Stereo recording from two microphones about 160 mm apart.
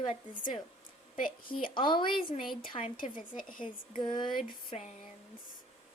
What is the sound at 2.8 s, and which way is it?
Speech, 60° left (ahead or behind).